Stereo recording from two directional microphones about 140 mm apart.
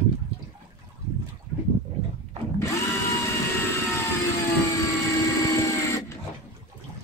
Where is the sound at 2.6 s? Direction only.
20° left (ahead or behind).